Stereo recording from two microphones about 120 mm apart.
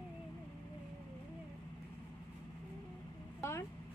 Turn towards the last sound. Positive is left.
turn(degrees=25)  # may be behind; listen again after turning